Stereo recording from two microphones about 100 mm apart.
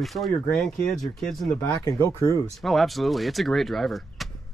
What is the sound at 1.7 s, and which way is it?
Speech, 35° left (ahead or behind).